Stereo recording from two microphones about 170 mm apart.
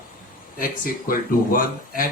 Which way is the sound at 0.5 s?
55° left (ahead or behind).